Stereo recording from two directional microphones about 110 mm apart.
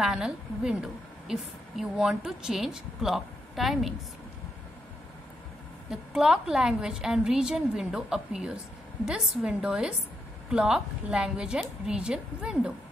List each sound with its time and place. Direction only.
0.0 s a woman's voice: 5° right (ahead or behind)
5.9 s a woman's voice: 5° right (ahead or behind)